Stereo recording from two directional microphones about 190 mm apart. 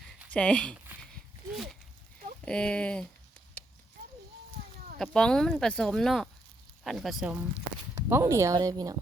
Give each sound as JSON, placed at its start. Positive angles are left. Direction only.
{"t": 0.3, "sound": "speech", "side_deg": 5}
{"t": 1.1, "sound": "a sound", "side_deg": 0}
{"t": 2.4, "sound": "speech", "side_deg": 5}
{"t": 3.6, "sound": "a sound", "side_deg": 5}
{"t": 4.9, "sound": "speech", "side_deg": 5}
{"t": 8.1, "sound": "a woman's voice", "side_deg": -15}